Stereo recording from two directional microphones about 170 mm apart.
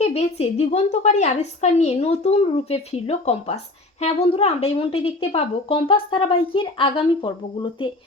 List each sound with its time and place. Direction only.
0.0 s a woman's voice: 40° left (ahead or behind)